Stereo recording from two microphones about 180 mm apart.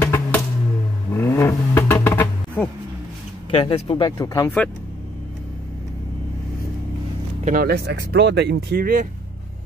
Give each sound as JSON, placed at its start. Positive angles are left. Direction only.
{"t": 0.0, "sound": "music", "side_deg": 15}
{"t": 1.1, "sound": "vehicle", "side_deg": 15}
{"t": 3.5, "sound": "speech", "side_deg": 30}
{"t": 4.6, "sound": "speech", "side_deg": 10}
{"t": 7.4, "sound": "speech", "side_deg": -55}